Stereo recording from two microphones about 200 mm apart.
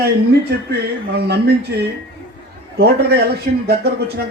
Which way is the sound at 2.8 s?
55° right (ahead or behind).